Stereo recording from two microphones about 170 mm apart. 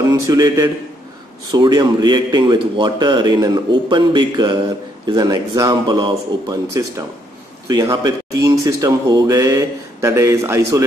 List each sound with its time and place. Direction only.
0.0 s a man's voice: 20° right (ahead or behind)